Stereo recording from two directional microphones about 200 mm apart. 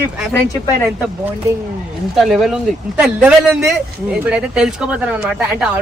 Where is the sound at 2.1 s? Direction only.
Centre (ahead or behind).